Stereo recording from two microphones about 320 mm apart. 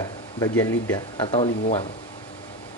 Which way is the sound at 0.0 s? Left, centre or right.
Centre.